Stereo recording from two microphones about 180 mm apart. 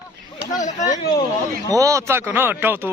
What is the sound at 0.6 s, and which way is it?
Speech, 45° left (ahead or behind).